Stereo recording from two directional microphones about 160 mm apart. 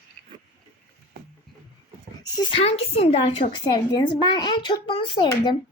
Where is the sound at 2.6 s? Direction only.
40° left (ahead or behind).